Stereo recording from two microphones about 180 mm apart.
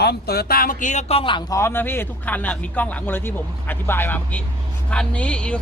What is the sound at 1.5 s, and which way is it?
Speech, 15° left (ahead or behind).